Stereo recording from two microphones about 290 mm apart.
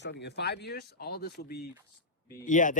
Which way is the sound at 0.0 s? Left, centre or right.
Left.